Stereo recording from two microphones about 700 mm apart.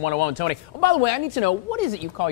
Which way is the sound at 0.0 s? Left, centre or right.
Left.